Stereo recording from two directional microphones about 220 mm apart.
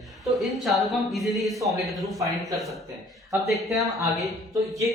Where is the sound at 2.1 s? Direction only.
15° right (ahead or behind).